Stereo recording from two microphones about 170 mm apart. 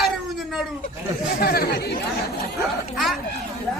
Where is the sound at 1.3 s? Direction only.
65° left (ahead or behind).